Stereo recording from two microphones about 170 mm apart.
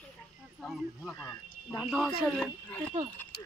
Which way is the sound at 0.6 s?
Centre (ahead or behind).